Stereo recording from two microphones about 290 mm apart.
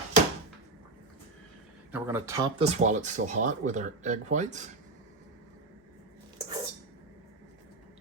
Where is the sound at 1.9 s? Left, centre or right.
Centre.